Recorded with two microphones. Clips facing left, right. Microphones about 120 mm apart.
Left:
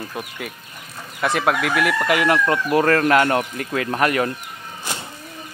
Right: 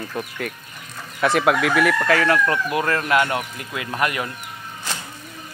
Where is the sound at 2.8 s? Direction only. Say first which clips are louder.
Left 5 dB; 40° left (ahead or behind).